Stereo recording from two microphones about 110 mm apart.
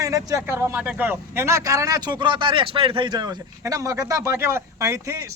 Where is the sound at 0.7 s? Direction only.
15° right (ahead or behind).